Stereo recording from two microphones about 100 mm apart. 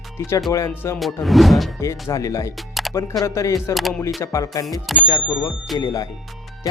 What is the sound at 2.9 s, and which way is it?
Speech, 30° left (ahead or behind).